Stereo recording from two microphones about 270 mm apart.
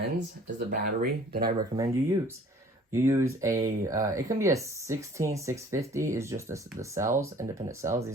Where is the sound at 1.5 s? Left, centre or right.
Centre.